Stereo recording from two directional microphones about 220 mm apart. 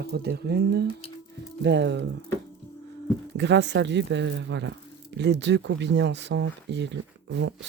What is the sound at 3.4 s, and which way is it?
Speech, 55° right (ahead or behind).